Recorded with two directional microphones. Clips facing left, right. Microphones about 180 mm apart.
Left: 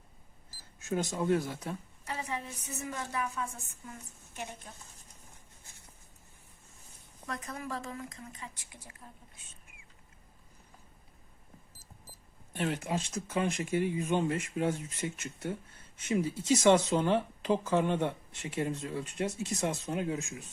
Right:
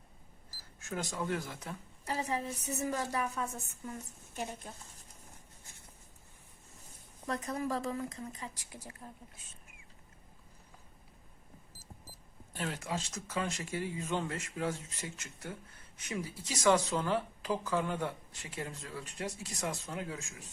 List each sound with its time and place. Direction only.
0.8 s speech: 20° left (ahead or behind)
2.0 s speech: 35° right (ahead or behind)
7.3 s speech: 35° right (ahead or behind)
12.6 s speech: 20° left (ahead or behind)